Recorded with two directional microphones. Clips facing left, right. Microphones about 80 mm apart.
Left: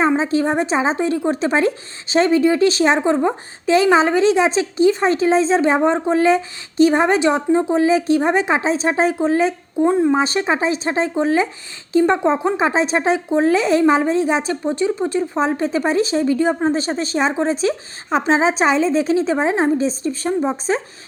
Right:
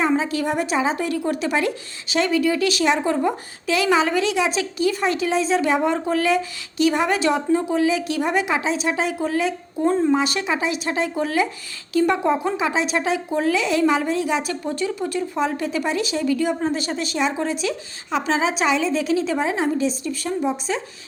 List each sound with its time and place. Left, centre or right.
0.2 s speech: left
9.7 s speech: centre
10.2 s speech: left